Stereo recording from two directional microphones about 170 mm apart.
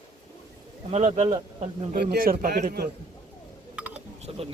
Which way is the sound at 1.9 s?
65° right (ahead or behind).